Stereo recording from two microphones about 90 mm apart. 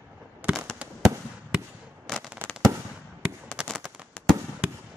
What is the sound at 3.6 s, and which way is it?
Fireworks, 10° right (ahead or behind).